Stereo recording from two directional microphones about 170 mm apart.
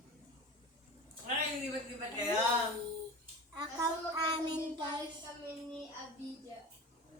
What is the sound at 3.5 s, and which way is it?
Child singing, 25° right (ahead or behind).